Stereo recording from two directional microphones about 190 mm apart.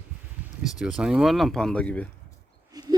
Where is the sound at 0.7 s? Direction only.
Centre (ahead or behind).